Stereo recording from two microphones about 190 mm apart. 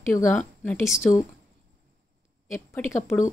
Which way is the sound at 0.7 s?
Centre (ahead or behind).